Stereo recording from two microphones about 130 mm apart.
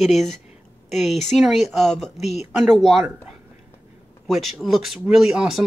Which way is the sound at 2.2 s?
55° left (ahead or behind).